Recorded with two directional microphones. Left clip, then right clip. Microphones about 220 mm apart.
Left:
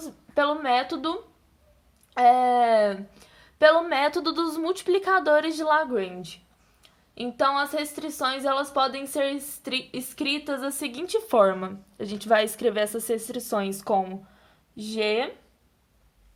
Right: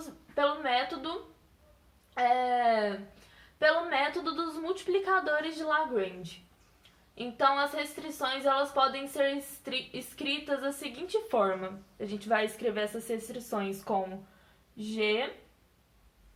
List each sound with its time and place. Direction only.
0.3 s a woman's voice: 45° left (ahead or behind)
2.1 s a woman's voice: 50° left (ahead or behind)
7.2 s a woman's voice: 45° left (ahead or behind)